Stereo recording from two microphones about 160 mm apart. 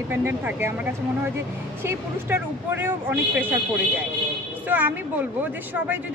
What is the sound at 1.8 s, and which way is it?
A woman's voice, 15° right (ahead or behind).